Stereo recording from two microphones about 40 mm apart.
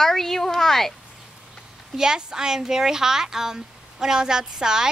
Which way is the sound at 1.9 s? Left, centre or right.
Centre.